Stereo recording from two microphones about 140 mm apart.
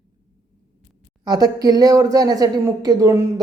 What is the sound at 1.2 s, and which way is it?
Speech, 30° right (ahead or behind).